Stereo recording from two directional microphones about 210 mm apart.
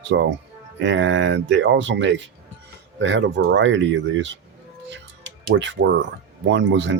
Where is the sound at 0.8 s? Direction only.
60° right (ahead or behind).